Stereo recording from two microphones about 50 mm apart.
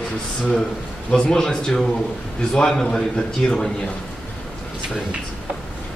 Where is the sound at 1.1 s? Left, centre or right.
Centre.